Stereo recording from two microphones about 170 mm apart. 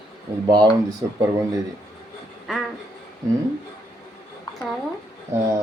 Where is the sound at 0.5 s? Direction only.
25° right (ahead or behind).